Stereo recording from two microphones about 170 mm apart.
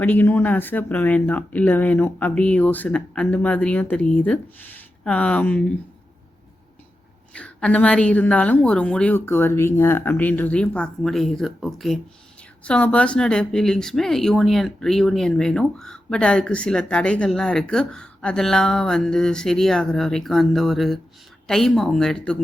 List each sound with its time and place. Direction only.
0.0 s speech: 10° left (ahead or behind)
7.3 s speech: 5° left (ahead or behind)